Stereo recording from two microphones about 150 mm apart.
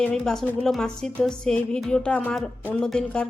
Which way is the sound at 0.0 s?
5° left (ahead or behind).